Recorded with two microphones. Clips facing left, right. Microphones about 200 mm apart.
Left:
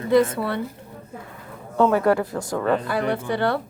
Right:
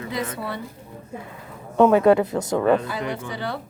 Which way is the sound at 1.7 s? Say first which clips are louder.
Right 3 dB; 20° right (ahead or behind).